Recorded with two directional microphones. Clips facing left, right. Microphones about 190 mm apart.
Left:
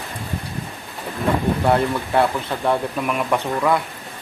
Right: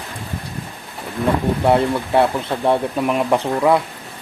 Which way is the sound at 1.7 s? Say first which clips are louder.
Right 4 dB; 25° right (ahead or behind).